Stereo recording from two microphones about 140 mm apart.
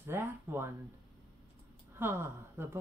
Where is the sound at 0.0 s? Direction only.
15° right (ahead or behind).